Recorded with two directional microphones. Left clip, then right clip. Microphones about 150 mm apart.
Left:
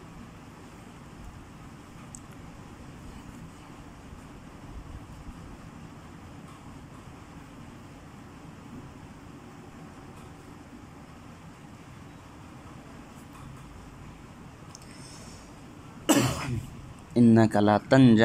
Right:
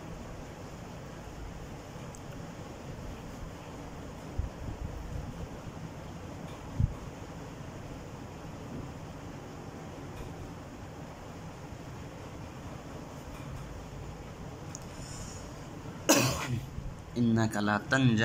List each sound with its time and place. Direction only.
16.1 s cough: centre (ahead or behind)
17.1 s a man's voice: 30° left (ahead or behind)